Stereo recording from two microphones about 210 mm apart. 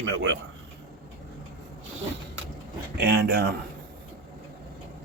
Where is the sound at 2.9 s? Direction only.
50° right (ahead or behind).